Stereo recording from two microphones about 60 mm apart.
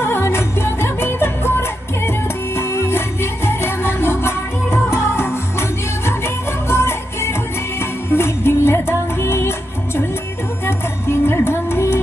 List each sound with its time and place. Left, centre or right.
0.0 s music: left